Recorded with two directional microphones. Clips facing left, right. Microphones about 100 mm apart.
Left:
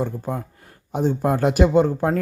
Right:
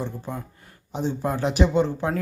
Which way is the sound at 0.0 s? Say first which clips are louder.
Left 6 dB; 45° left (ahead or behind).